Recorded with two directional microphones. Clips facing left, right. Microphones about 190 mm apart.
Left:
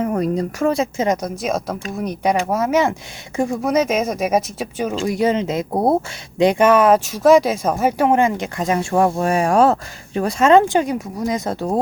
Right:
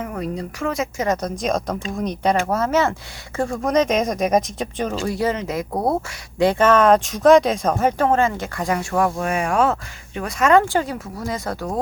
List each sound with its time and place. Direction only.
0.0 s a woman's voice: 40° left (ahead or behind)
1.0 s speech: 10° left (ahead or behind)
5.0 s speech: 20° left (ahead or behind)